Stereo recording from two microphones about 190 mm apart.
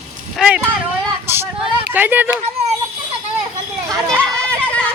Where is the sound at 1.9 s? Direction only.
10° right (ahead or behind).